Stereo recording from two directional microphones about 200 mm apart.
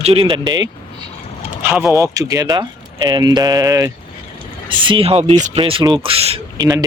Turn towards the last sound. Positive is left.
turn(degrees=-30)  # may be behind; listen again after turning